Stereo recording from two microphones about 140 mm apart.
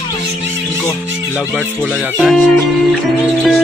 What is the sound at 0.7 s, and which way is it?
Speech, 15° left (ahead or behind).